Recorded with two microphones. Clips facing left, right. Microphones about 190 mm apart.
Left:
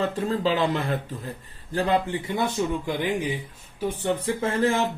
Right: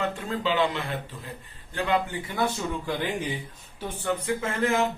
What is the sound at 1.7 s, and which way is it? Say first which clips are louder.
Speech: left 3 dB; 35° left (ahead or behind).